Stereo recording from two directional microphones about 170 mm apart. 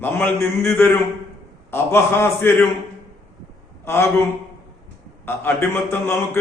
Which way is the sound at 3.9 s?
15° left (ahead or behind).